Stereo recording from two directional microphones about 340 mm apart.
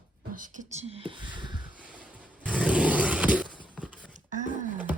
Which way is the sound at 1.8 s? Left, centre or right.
Centre.